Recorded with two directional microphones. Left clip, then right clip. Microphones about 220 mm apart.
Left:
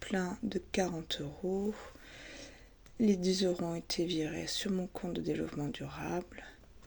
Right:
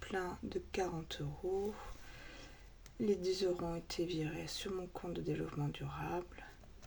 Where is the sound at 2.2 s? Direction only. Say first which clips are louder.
Left 6 dB; 30° left (ahead or behind).